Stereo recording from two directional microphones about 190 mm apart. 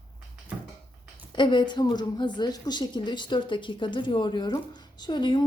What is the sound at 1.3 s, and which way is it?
A woman's voice, 25° left (ahead or behind).